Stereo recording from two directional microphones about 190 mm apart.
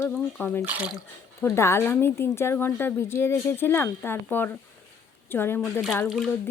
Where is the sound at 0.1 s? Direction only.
5° left (ahead or behind).